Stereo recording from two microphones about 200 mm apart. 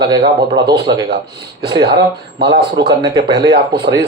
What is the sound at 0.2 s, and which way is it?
Speech, 55° right (ahead or behind).